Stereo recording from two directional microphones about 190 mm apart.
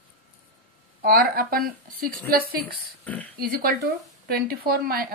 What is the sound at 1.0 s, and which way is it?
A woman's voice, 50° right (ahead or behind).